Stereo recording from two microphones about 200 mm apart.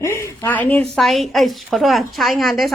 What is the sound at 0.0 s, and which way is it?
A woman's voice, 15° left (ahead or behind).